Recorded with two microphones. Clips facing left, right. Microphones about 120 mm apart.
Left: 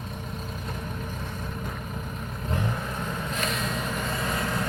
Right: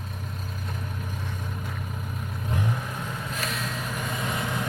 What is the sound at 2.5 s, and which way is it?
Vehicle, 5° right (ahead or behind).